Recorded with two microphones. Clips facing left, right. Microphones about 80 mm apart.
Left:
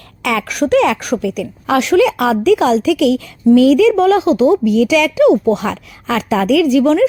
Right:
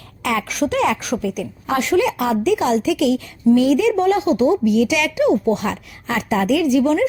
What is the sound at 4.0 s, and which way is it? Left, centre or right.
Speech, left.